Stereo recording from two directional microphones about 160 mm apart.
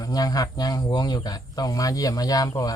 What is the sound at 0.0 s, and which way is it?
Speech, 25° left (ahead or behind).